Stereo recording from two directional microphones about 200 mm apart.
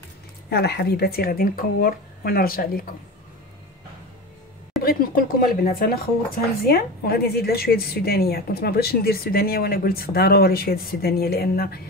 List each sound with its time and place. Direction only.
0.5 s speech: 55° left (ahead or behind)
4.8 s speech: 45° left (ahead or behind)